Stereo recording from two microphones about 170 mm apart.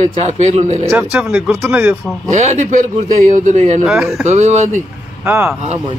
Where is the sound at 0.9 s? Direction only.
10° right (ahead or behind).